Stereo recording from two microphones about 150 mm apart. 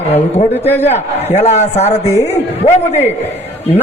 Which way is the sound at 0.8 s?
45° left (ahead or behind).